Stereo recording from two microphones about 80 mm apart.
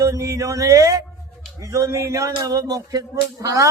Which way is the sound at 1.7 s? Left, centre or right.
Right.